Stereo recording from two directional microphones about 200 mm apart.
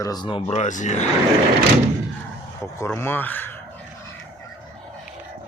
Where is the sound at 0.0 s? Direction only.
20° left (ahead or behind).